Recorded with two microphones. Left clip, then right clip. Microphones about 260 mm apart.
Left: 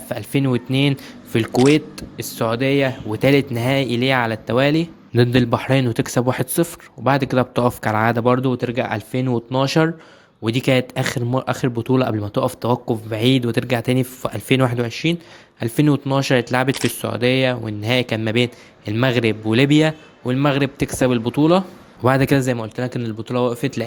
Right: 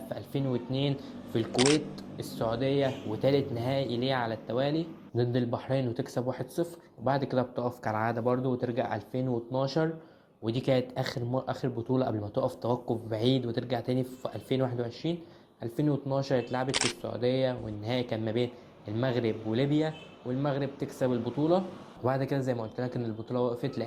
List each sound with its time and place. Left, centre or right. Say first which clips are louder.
0.7 s speech: left 13 dB; left
1.5 s a man's voice: left 10 dB; centre
2.0 s speech: left 10 dB; left
3.8 s speech: left 11 dB; left
4.1 s speech: left 12 dB; left